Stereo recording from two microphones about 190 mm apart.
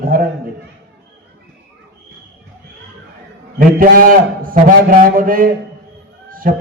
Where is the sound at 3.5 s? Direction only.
50° right (ahead or behind).